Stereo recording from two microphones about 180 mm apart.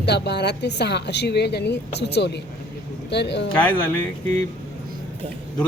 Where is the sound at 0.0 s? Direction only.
70° left (ahead or behind).